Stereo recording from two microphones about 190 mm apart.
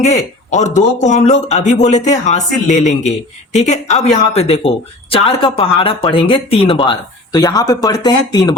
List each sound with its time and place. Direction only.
0.0 s speech: 35° left (ahead or behind); by 8.5 s 20° left (ahead or behind)